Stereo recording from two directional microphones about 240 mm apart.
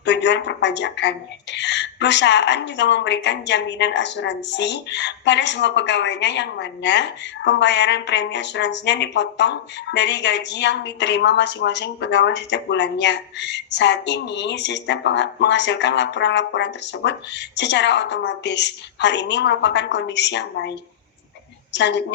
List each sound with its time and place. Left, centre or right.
0.0 s a woman's voice: left